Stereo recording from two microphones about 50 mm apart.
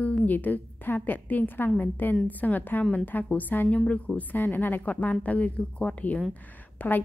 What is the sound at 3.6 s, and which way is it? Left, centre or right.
A woman's voice, left.